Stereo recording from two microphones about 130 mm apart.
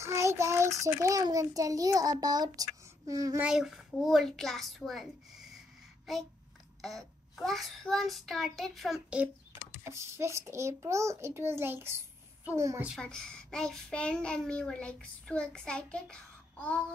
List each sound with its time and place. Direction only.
0.0 s child singing: 20° right (ahead or behind)
1.0 s a child's voice: 25° right (ahead or behind)
3.3 s a child's voice: 5° right (ahead or behind)
6.8 s a child's voice: centre (ahead or behind)
9.8 s a child's voice: 20° right (ahead or behind)
13.0 s a child's voice: 5° left (ahead or behind)